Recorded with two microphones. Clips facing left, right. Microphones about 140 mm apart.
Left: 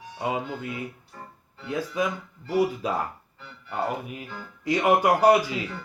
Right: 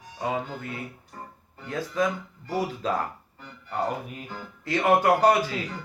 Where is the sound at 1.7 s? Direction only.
15° left (ahead or behind).